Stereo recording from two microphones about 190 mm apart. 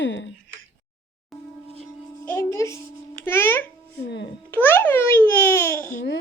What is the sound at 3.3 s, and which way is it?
Babbling, 10° left (ahead or behind).